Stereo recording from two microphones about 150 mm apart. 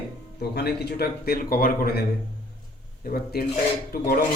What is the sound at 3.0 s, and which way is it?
Speech, 85° left.